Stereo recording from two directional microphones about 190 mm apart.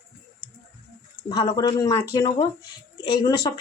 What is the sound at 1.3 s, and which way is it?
Speech, 25° left (ahead or behind).